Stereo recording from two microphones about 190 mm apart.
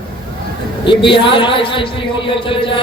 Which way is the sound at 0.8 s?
25° left (ahead or behind).